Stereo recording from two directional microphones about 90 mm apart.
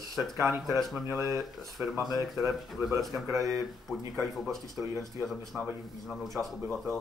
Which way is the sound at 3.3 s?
40° right (ahead or behind).